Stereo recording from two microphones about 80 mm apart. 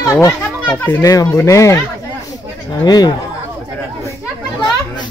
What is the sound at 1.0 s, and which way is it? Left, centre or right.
Speech, left.